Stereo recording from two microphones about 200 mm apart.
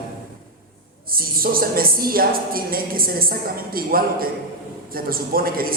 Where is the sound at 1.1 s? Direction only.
45° right (ahead or behind).